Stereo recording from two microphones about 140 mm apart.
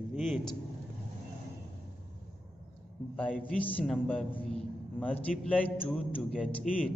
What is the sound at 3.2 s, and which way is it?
A man's voice, 5° left (ahead or behind).